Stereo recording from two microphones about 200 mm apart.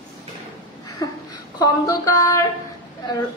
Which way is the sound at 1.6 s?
15° left (ahead or behind).